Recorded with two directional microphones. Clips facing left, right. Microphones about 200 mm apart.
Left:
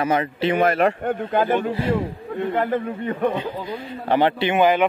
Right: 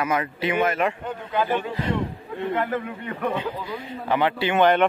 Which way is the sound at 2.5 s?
30° left (ahead or behind).